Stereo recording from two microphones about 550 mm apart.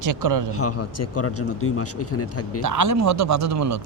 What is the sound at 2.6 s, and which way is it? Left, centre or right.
Speech, right.